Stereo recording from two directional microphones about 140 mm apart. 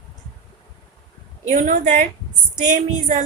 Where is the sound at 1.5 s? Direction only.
60° right (ahead or behind).